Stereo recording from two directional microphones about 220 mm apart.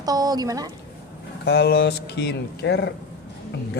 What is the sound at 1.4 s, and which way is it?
Speech, 45° left (ahead or behind).